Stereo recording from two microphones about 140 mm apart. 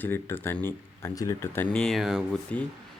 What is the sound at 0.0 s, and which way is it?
Speech, 15° left (ahead or behind).